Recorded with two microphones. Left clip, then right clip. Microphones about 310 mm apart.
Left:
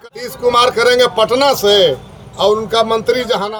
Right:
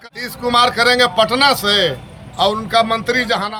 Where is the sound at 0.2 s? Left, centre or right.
Centre.